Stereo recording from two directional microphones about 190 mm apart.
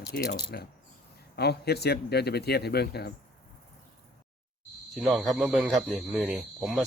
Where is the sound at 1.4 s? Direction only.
60° left (ahead or behind).